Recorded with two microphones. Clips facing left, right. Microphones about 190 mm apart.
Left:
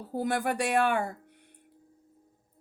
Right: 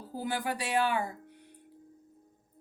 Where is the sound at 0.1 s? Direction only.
65° left (ahead or behind).